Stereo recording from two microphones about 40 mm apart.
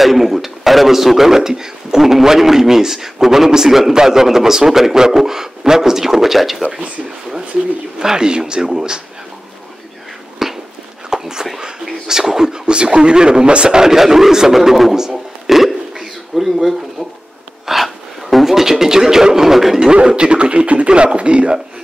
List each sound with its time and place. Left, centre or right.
0.0 s a man's voice: centre
8.0 s a man's voice: centre
10.4 s a sound: centre
12.6 s a man's voice: right; by 19.9 s centre
19.9 s speech: right